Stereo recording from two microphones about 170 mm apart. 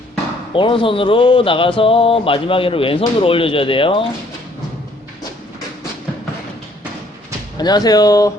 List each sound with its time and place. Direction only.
0.5 s speech: 30° left (ahead or behind)
7.6 s speech: 25° left (ahead or behind)